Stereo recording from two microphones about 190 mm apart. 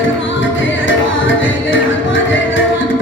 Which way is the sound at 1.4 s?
85° left.